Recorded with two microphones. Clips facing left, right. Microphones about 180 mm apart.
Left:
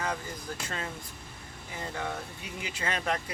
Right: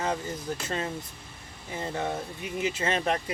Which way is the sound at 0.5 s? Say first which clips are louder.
Right 5 dB; 20° right (ahead or behind).